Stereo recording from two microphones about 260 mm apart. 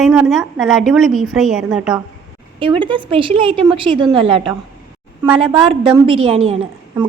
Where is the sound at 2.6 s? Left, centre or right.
Centre.